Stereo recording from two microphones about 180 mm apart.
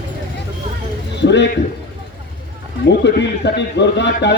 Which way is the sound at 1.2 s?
75° left (ahead or behind).